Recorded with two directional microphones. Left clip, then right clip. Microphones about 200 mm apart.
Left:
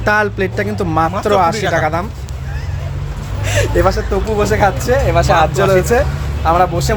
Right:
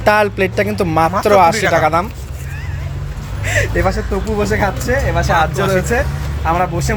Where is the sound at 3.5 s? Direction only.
15° left (ahead or behind).